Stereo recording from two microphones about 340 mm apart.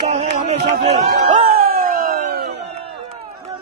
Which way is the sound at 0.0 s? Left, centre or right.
Right.